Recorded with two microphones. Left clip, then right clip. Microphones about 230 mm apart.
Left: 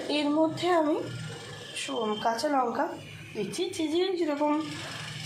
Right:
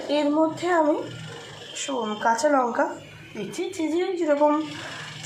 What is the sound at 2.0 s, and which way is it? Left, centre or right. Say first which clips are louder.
A woman's voice: right 7 dB; centre.